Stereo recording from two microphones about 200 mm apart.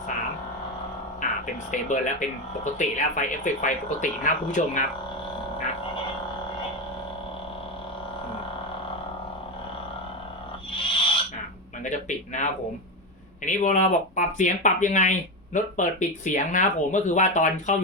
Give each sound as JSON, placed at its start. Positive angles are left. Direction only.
{"t": 1.2, "sound": "music", "side_deg": 40}
{"t": 1.7, "sound": "speech", "side_deg": 40}
{"t": 10.7, "sound": "frog", "side_deg": 25}
{"t": 11.8, "sound": "speech", "side_deg": 40}